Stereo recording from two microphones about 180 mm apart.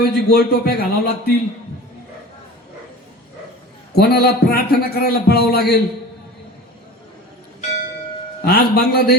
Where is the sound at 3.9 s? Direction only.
65° left (ahead or behind).